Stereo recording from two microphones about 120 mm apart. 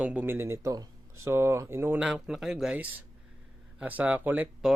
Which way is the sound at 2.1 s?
5° right (ahead or behind).